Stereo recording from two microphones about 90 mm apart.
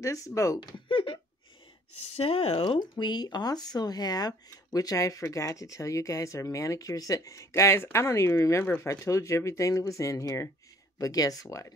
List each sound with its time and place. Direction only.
0.0 s speech: 35° left (ahead or behind)
0.6 s speech: 60° left (ahead or behind)
2.1 s speech: 90° left
2.8 s speech: 55° left (ahead or behind)